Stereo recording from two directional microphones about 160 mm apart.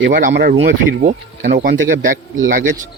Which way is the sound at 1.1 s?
60° right (ahead or behind).